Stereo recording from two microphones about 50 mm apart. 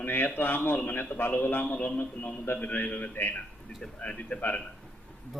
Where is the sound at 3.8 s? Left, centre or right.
Left.